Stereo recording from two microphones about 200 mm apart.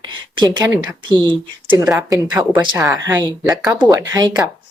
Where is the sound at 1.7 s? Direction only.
10° right (ahead or behind).